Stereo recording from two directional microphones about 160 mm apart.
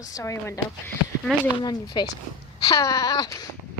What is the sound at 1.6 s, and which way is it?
Wail, 25° left (ahead or behind).